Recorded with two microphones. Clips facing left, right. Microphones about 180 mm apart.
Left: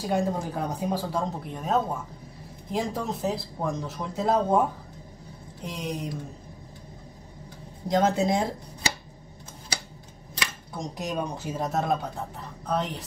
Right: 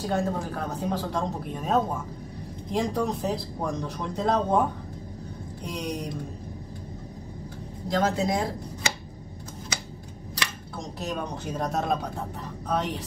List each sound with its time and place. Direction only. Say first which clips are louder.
0.0 s speech: left 1 dB; 15° left (ahead or behind)
1.5 s speech: right 1 dB; centre (ahead or behind)
5.7 s speech: right 1 dB; centre (ahead or behind)
7.9 s speech: left 2 dB; 25° left (ahead or behind)
11.0 s speech: left 1 dB; 15° left (ahead or behind)
11.5 s speech: even; 5° left (ahead or behind)